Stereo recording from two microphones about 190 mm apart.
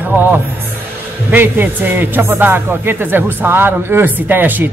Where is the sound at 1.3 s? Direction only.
10° right (ahead or behind).